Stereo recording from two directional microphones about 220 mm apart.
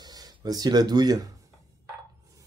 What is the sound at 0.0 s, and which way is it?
Speech, 20° right (ahead or behind).